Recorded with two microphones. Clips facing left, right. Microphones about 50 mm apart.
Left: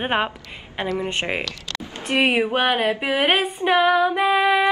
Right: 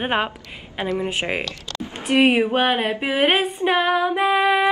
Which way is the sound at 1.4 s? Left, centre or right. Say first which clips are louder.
Even; left.